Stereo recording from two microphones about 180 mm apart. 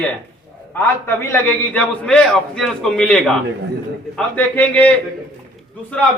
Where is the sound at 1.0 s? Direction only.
10° left (ahead or behind).